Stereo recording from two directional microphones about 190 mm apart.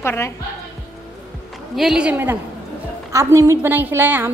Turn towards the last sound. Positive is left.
turn(degrees=-10)  # may be behind; listen again after turning